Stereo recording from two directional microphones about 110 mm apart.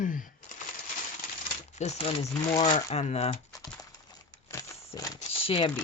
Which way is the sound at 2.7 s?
85° left.